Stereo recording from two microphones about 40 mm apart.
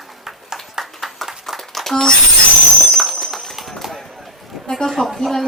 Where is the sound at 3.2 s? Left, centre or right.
Centre.